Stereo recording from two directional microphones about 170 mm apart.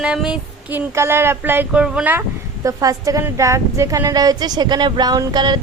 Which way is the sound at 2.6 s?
20° right (ahead or behind).